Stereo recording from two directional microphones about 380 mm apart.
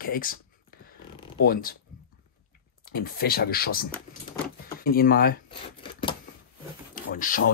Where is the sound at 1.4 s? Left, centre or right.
Left.